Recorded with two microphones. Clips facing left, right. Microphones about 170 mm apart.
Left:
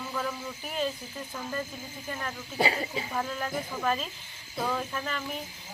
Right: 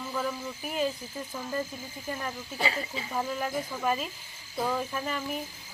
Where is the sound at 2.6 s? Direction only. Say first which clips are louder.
Left 4 dB; 40° left (ahead or behind).